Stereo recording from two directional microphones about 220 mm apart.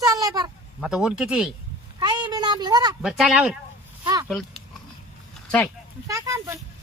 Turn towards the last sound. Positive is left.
turn(degrees=-15)  # may be behind; listen again after turning